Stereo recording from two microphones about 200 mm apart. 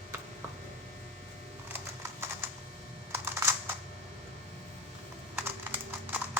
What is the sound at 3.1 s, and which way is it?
Computer keyboard, 10° right (ahead or behind).